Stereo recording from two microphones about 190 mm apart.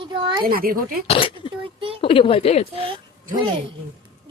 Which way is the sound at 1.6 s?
30° right (ahead or behind).